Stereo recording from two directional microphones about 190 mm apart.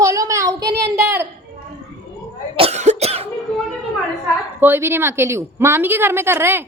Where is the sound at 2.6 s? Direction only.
35° right (ahead or behind).